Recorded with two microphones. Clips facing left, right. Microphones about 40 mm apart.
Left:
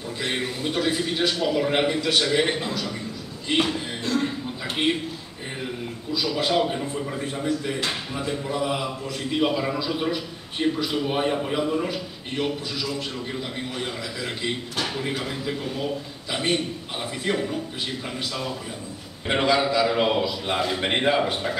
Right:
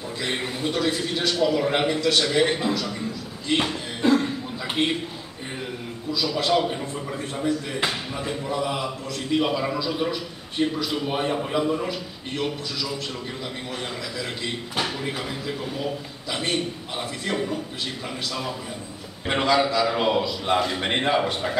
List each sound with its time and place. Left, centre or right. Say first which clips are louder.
0.2 s a man's voice: even; centre
4.0 s cough: right 7 dB; right
4.8 s a man's voice: even; centre
6.1 s a man's voice: even; centre
13.7 s a man's voice: left 1 dB; centre
19.2 s a man's voice: even; centre